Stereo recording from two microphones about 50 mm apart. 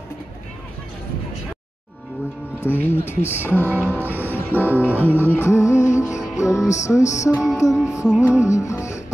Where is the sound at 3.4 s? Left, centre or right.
Left.